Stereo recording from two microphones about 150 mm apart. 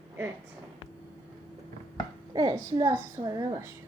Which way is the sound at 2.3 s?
25° right (ahead or behind).